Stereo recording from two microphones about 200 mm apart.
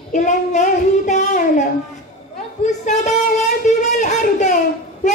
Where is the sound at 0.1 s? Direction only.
40° left (ahead or behind).